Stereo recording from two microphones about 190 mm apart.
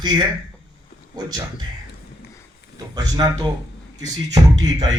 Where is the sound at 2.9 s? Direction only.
20° right (ahead or behind).